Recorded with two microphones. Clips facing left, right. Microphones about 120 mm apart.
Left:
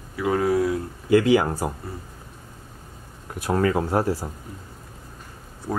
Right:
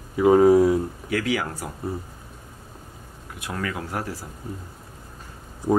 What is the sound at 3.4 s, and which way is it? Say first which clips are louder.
Speech: left 9 dB; 35° left (ahead or behind).